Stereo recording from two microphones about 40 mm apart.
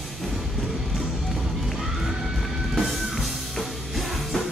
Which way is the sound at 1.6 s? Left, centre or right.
Centre.